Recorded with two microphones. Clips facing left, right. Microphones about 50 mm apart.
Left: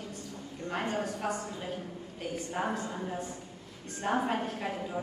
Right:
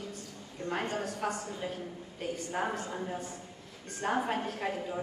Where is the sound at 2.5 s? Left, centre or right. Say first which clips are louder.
Left 1 dB; centre.